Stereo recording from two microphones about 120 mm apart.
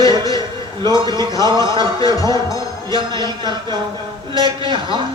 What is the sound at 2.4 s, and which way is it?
Music, 30° left (ahead or behind).